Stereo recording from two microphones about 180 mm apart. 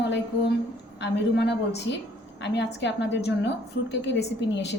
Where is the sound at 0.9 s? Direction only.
75° left (ahead or behind).